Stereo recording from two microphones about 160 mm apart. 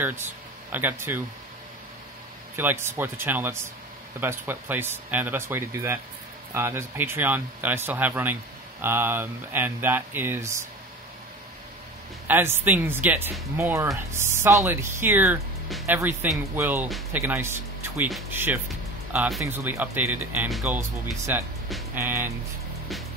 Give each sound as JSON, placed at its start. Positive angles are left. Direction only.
{"t": 0.0, "sound": "speech", "side_deg": -15}
{"t": 2.5, "sound": "speech", "side_deg": -15}
{"t": 12.3, "sound": "speech", "side_deg": -15}
{"t": 19.1, "sound": "speech", "side_deg": 0}
{"t": 19.4, "sound": "speech", "side_deg": -15}